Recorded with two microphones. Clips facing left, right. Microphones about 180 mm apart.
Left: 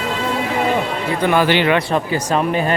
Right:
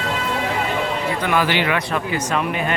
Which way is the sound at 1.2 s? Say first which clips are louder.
Left 6 dB; 30° left (ahead or behind).